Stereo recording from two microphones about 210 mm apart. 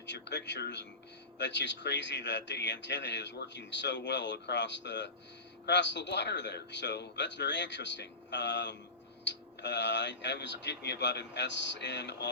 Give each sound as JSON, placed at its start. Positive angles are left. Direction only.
{"t": 0.0, "sound": "speech", "side_deg": 55}